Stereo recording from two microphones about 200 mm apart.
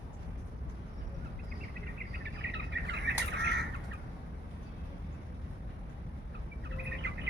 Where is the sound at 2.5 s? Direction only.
60° right (ahead or behind).